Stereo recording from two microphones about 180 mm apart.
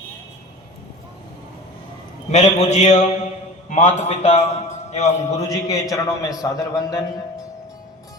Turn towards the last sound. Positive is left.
turn(degrees=20)  # may be behind; listen again after turning